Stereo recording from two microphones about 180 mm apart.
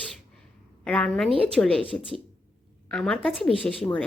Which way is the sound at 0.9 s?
5° left (ahead or behind).